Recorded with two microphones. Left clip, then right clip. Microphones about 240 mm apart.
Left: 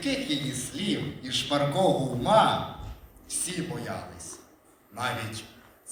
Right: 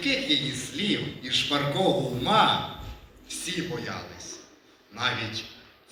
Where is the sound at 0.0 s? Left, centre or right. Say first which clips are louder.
Right 5 dB; left.